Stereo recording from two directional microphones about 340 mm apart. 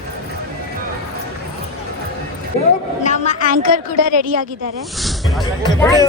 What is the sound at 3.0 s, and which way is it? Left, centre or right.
Speech, left.